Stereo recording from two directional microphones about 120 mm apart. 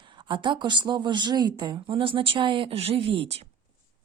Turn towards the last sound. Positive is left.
turn(degrees=-50)  # may be behind; listen again after turning